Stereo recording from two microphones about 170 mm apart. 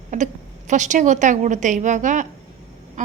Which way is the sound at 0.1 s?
50° right (ahead or behind).